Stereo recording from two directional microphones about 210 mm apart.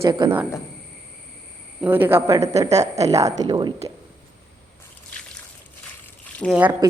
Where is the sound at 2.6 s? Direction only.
30° right (ahead or behind).